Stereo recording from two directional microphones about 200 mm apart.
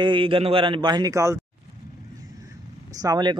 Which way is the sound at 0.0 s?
25° right (ahead or behind).